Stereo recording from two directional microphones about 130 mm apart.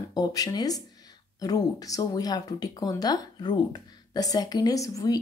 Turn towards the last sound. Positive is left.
turn(degrees=25)  # may be behind; listen again after turning